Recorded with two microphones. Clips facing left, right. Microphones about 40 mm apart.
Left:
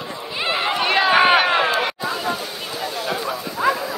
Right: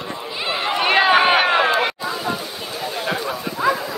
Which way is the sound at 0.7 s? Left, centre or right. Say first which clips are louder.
Right 4 dB; centre.